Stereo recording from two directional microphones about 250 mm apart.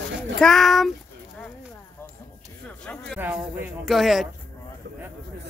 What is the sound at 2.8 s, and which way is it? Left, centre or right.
Speech, centre.